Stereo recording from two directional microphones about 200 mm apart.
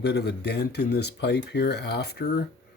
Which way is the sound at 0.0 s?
55° left (ahead or behind).